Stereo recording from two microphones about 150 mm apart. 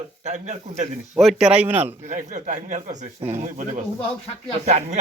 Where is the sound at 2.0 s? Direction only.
55° right (ahead or behind).